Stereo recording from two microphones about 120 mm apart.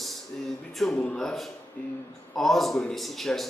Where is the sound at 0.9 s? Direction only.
10° left (ahead or behind).